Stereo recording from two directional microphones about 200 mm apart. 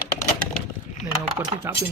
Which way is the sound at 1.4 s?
20° right (ahead or behind).